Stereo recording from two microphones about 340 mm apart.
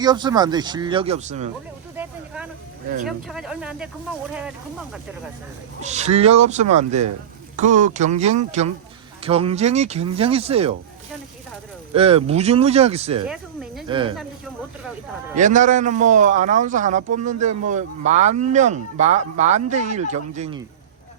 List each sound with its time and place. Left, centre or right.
0.0 s speech: centre
2.0 s a sound: centre
3.1 s speech: centre
5.8 s speech: centre
11.9 s speech: centre
13.2 s a sound: centre
13.8 s speech: centre
15.4 s speech: right